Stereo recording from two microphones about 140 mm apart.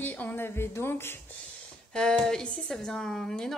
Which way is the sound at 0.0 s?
10° left (ahead or behind).